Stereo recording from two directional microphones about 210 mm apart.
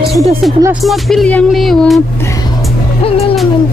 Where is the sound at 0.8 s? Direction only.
Centre (ahead or behind).